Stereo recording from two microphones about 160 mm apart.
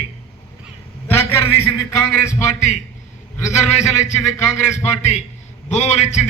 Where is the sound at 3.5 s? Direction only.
45° left (ahead or behind).